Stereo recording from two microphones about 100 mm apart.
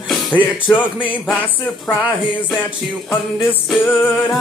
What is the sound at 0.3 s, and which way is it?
Music, 55° left (ahead or behind).